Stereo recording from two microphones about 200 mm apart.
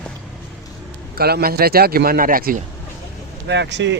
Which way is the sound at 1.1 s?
50° right (ahead or behind).